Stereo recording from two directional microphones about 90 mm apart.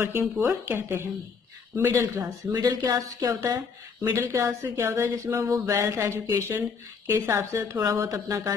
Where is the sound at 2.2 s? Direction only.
40° right (ahead or behind).